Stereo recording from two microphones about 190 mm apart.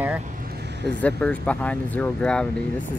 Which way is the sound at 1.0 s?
5° left (ahead or behind).